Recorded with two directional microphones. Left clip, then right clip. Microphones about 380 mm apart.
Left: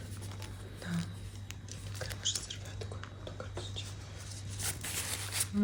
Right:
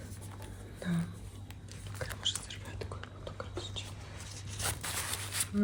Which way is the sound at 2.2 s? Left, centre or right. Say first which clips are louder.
Right 1 dB; centre.